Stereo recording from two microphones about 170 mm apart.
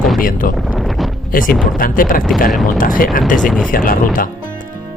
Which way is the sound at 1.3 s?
55° left (ahead or behind).